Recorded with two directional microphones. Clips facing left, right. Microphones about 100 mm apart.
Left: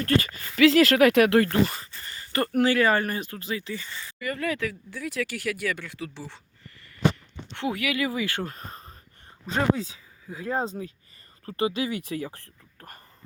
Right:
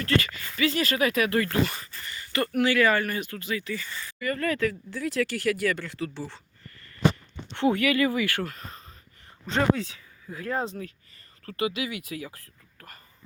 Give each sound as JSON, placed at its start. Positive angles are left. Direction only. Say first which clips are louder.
{"t": 0.0, "sound": "speech", "louder": "left 2 dB", "side_deg": 40}
{"t": 0.5, "sound": "speech", "louder": "left 8 dB", "side_deg": 90}
{"t": 1.5, "sound": "speech", "louder": "left 2 dB", "side_deg": 30}
{"t": 7.5, "sound": "speech", "louder": "right 5 dB", "side_deg": 0}
{"t": 8.4, "sound": "a sound", "louder": "left 1 dB", "side_deg": 35}
{"t": 9.5, "sound": "speech", "louder": "right 1 dB", "side_deg": 10}